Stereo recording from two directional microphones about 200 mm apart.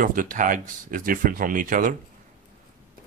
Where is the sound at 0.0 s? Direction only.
40° right (ahead or behind).